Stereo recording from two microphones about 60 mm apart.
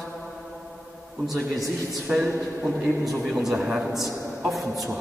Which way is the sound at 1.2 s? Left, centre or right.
Centre.